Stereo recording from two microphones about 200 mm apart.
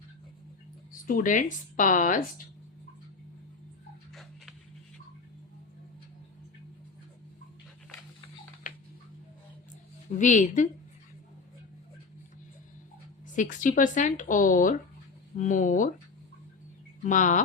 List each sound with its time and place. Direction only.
1.0 s speech: 45° left (ahead or behind)
4.1 s a sound: centre (ahead or behind)
10.2 s speech: 40° left (ahead or behind)
13.2 s speech: 40° left (ahead or behind)
17.0 s speech: 40° left (ahead or behind)